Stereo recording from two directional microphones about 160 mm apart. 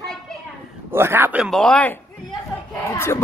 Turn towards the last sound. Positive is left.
turn(degrees=15)  # may be behind; listen again after turning